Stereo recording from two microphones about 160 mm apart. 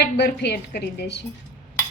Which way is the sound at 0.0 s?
90° left.